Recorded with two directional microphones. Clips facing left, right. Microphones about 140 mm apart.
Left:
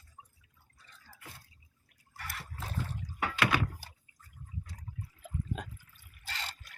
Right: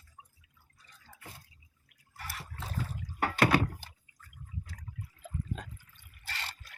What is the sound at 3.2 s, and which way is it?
Door, 40° right (ahead or behind).